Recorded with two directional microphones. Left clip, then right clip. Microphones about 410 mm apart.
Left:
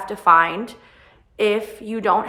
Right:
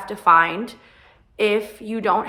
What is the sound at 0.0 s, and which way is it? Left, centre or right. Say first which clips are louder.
A woman's voice: left 1 dB; centre.